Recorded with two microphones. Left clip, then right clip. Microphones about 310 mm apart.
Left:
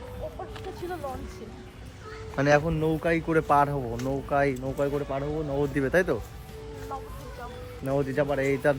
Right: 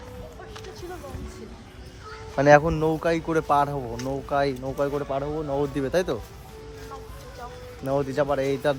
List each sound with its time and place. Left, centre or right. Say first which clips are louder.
2.5 s speech: right 6 dB; right; by 6.1 s centre
7.9 s speech: right 2 dB; centre